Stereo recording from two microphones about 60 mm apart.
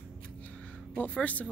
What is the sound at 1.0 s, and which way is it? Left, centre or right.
Speech, left.